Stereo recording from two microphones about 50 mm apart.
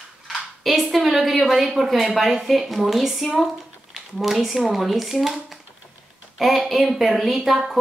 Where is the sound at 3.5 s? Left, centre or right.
Centre.